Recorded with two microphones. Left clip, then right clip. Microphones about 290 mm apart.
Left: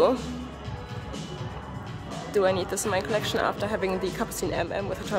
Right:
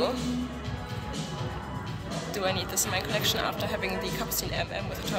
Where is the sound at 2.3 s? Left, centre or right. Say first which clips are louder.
Left 6 dB; left.